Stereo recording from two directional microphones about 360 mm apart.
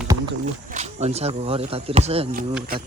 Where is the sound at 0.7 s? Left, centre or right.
Centre.